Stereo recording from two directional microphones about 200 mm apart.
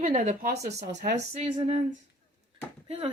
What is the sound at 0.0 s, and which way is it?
Speech, 35° right (ahead or behind).